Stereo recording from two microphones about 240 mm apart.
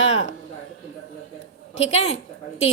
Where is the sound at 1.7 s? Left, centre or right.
Left.